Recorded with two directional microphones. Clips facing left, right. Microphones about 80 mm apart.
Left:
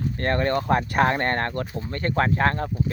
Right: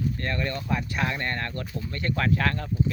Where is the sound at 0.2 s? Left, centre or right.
Left.